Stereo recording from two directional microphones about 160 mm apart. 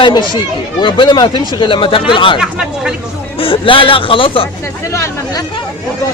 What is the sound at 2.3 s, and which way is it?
Speech, 5° right (ahead or behind).